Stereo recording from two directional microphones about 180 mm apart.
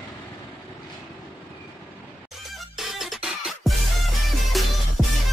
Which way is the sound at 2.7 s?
Centre (ahead or behind).